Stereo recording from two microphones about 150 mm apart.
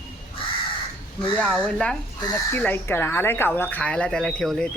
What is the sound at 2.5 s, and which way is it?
A woman's voice, 15° left (ahead or behind).